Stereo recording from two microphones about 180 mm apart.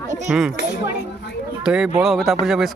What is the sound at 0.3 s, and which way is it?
Speech, 10° right (ahead or behind).